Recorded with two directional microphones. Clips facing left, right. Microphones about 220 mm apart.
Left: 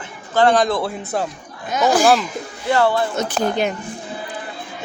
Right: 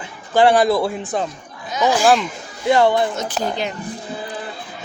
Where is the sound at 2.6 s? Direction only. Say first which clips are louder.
Right 2 dB; 15° right (ahead or behind).